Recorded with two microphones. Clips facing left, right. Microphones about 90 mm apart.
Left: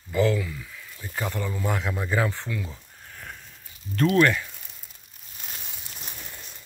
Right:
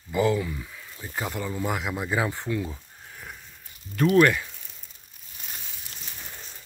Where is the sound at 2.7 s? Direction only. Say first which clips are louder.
Right 1 dB; 10° right (ahead or behind).